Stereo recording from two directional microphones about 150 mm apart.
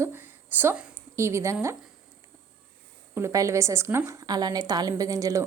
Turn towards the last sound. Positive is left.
turn(degrees=-20)  # may be behind; listen again after turning